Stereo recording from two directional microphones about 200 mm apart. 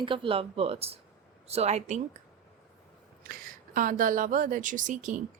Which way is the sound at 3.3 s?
45° right (ahead or behind).